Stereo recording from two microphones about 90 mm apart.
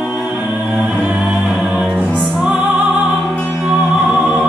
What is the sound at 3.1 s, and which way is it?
Music, 10° left (ahead or behind).